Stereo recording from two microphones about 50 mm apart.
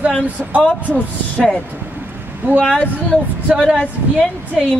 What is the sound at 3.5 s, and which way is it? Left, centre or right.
Speech, right.